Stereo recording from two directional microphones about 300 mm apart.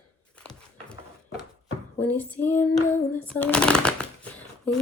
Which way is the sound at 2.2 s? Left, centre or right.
Centre.